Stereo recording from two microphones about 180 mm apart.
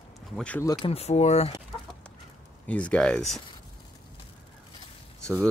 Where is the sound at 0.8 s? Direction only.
35° left (ahead or behind).